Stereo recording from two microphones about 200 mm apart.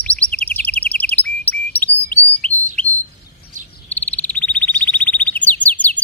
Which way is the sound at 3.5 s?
40° right (ahead or behind).